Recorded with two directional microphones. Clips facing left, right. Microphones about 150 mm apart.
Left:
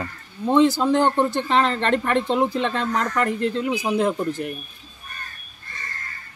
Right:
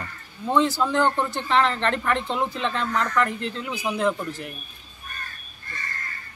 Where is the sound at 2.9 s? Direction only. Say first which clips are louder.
Left 1 dB; 40° left (ahead or behind).